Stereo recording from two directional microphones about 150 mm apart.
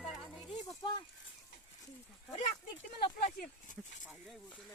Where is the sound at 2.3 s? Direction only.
50° left (ahead or behind).